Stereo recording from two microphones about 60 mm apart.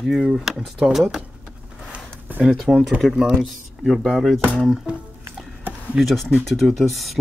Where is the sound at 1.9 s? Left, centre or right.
Right.